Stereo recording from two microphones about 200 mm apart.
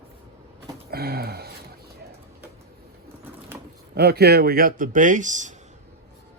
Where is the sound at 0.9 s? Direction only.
50° right (ahead or behind).